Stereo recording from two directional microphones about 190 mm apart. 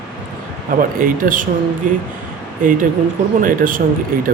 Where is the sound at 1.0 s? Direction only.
45° right (ahead or behind).